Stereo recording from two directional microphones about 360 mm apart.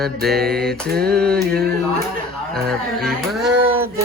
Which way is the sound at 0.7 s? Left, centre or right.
Right.